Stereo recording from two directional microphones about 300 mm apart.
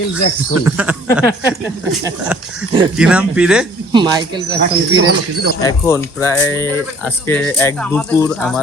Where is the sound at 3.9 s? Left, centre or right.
Centre.